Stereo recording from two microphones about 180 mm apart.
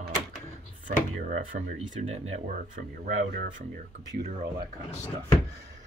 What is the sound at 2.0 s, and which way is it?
Speech, 40° right (ahead or behind).